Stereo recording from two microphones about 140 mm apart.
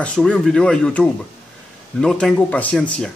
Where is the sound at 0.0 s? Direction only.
5° left (ahead or behind).